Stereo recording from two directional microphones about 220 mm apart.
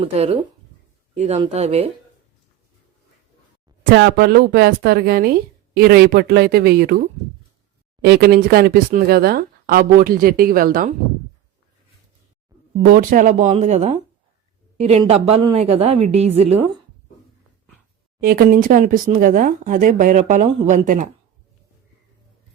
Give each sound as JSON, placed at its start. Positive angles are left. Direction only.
{"t": 0.0, "sound": "a woman's voice", "side_deg": -25}
{"t": 3.9, "sound": "speech", "side_deg": -45}
{"t": 12.9, "sound": "a woman's voice", "side_deg": -40}
{"t": 18.2, "sound": "speech", "side_deg": -40}